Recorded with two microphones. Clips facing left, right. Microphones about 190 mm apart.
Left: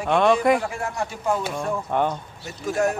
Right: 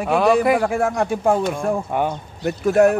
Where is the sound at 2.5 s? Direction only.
60° right (ahead or behind).